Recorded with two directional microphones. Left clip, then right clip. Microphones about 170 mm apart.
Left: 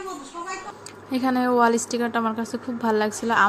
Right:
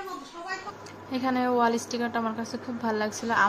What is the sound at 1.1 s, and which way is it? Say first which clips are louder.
A woman's voice: left 4 dB; 25° left (ahead or behind).